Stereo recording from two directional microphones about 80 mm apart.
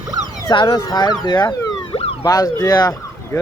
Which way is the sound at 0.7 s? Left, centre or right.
Left.